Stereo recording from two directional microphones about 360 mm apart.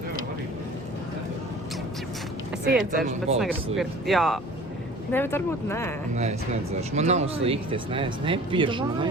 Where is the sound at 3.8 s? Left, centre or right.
Centre.